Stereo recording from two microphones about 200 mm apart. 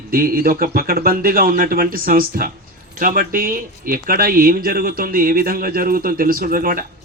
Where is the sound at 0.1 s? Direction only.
45° right (ahead or behind).